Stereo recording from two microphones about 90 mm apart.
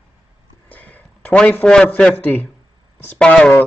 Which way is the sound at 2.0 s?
15° left (ahead or behind).